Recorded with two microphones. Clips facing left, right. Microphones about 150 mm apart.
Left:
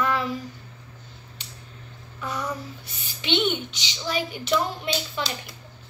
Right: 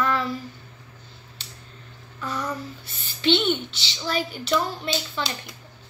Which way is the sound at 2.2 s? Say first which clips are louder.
Right 1 dB; 10° left (ahead or behind).